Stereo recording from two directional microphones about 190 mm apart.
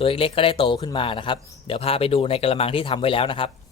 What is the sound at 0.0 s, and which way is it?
A man's voice, 30° left (ahead or behind).